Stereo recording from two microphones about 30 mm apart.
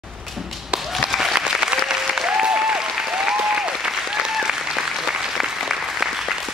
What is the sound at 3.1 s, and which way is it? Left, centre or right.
Applause, right.